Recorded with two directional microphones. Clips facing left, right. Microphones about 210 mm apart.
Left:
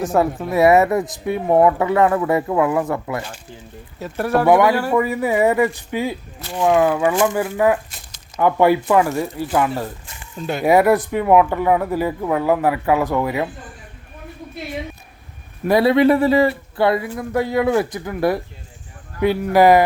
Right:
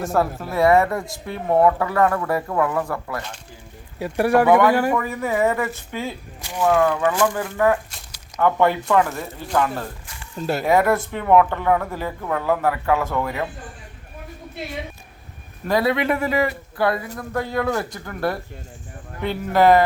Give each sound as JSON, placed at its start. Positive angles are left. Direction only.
{"t": 0.0, "sound": "speech", "side_deg": 0}
{"t": 0.5, "sound": "speech", "side_deg": 20}
{"t": 3.2, "sound": "speech", "side_deg": 5}
{"t": 3.9, "sound": "speech", "side_deg": -10}
{"t": 4.4, "sound": "speech", "side_deg": 15}
{"t": 10.3, "sound": "speech", "side_deg": -5}
{"t": 10.7, "sound": "speech", "side_deg": 15}
{"t": 15.8, "sound": "a man's voice", "side_deg": 30}